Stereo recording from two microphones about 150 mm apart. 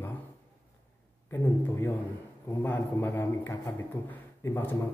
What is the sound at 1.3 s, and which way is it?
A man's voice, 15° left (ahead or behind).